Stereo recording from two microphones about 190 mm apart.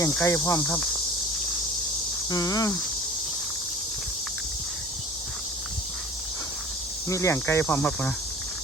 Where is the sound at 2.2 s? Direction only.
20° left (ahead or behind).